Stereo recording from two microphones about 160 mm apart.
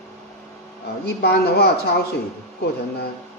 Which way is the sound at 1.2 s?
80° left.